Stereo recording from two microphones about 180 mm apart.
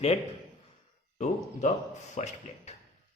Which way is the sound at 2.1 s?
40° left (ahead or behind).